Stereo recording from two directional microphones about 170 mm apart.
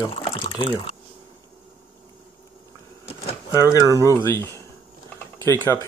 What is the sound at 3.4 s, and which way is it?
Speech, 20° left (ahead or behind).